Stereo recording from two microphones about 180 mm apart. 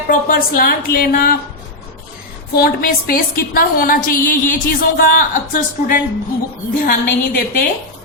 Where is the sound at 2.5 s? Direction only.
55° left (ahead or behind).